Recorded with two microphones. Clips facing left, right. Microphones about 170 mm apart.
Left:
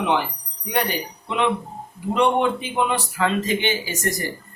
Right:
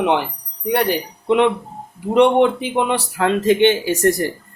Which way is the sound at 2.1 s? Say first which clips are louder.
Right 6 dB; 75° right (ahead or behind).